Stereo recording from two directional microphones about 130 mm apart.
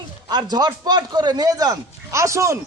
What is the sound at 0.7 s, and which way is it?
A man's voice, 30° right (ahead or behind).